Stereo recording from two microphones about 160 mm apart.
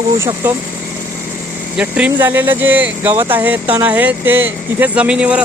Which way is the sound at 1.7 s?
10° right (ahead or behind).